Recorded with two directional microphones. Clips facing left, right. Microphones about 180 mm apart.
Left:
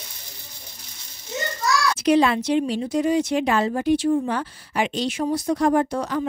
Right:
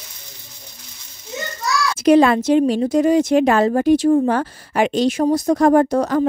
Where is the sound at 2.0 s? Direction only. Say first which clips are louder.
Right 7 dB; 45° right (ahead or behind).